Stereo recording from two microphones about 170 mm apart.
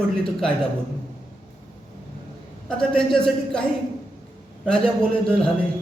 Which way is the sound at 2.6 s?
5° left (ahead or behind).